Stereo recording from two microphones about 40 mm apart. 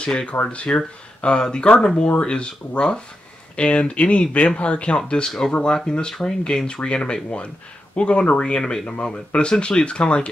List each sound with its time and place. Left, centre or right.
0.0 s speech: left